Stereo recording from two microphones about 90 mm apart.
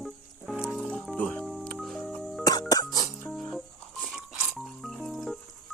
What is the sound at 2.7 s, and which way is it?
Music, 45° left (ahead or behind).